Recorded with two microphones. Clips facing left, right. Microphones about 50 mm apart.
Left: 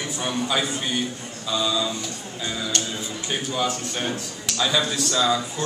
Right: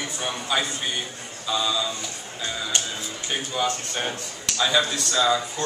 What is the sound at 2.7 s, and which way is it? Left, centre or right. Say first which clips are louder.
Speech: even; centre.